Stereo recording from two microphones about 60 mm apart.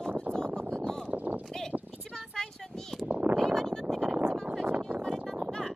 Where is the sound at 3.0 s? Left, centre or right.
Right.